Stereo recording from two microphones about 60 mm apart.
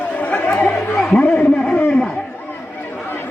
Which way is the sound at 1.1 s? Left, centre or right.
Left.